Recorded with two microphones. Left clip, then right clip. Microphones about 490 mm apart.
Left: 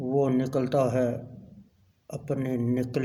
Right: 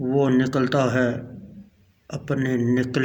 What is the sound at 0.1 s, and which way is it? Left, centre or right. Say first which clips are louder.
A man's voice: right 4 dB; left.